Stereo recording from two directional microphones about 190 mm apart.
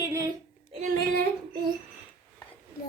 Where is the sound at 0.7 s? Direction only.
45° right (ahead or behind).